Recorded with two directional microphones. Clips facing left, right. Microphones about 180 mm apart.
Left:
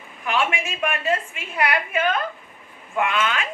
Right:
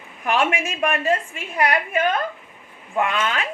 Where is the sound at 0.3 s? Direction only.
45° right (ahead or behind).